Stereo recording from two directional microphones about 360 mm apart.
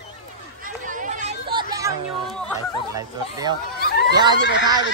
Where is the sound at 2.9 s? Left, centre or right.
Centre.